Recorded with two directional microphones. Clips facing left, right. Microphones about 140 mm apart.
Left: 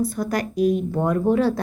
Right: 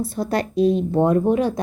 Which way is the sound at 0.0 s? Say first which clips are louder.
Right 1 dB; 25° right (ahead or behind).